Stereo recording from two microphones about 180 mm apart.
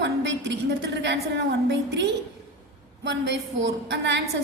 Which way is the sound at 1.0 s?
75° right (ahead or behind).